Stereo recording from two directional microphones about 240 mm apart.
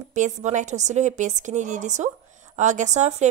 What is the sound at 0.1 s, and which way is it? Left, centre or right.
A woman's voice, right.